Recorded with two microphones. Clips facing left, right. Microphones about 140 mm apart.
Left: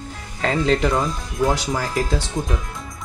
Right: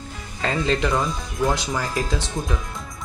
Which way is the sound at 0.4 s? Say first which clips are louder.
Left 3 dB; 5° left (ahead or behind).